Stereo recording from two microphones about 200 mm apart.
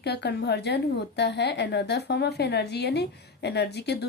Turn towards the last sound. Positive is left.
turn(degrees=55)  # may be behind; listen again after turning